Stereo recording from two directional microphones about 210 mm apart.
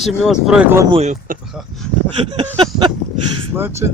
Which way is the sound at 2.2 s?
25° right (ahead or behind).